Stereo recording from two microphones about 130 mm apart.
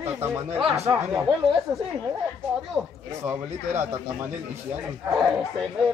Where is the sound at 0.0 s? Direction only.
20° right (ahead or behind).